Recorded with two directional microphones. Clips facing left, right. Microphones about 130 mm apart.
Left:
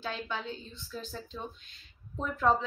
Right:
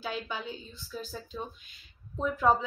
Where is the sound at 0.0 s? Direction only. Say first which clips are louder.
Right 1 dB; 5° right (ahead or behind).